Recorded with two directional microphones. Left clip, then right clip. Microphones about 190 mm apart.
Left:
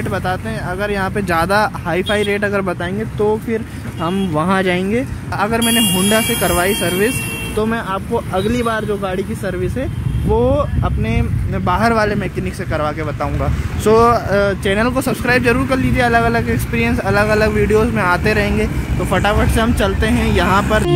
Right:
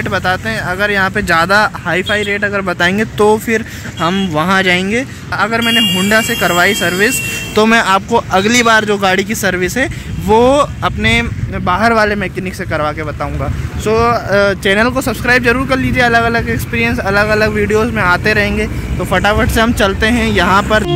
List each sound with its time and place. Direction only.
0.1 s speech: centre (ahead or behind)
2.8 s speech: 15° right (ahead or behind)
3.5 s speech: centre (ahead or behind)
7.5 s speech: 15° right (ahead or behind)
13.8 s speech: 20° left (ahead or behind)
14.3 s speech: 10° right (ahead or behind)